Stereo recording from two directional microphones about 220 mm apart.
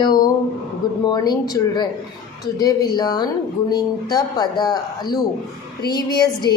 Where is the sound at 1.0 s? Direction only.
20° left (ahead or behind).